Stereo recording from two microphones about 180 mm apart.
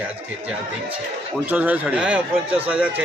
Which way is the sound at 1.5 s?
10° right (ahead or behind).